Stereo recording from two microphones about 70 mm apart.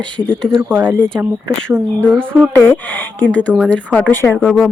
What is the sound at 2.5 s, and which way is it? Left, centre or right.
Speech, left.